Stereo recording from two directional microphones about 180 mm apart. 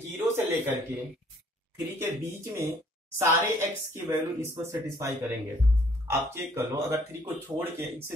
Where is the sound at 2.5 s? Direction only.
15° right (ahead or behind).